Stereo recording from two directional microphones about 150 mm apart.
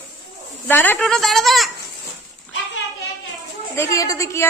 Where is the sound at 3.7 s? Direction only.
20° left (ahead or behind).